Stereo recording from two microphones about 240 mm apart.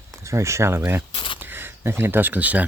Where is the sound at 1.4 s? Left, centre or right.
Centre.